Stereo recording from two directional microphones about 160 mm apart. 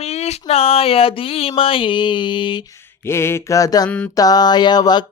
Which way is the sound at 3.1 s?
15° left (ahead or behind).